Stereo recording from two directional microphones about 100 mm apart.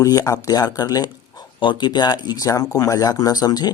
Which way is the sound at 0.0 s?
35° left (ahead or behind).